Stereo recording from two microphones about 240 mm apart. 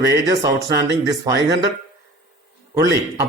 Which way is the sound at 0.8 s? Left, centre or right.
Right.